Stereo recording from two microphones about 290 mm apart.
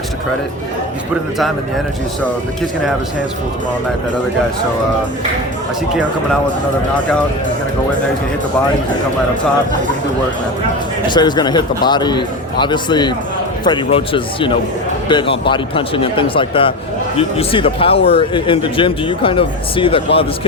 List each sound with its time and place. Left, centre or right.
11.1 s speech: centre